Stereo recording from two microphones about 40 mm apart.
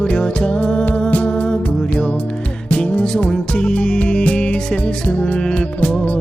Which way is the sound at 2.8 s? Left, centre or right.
Left.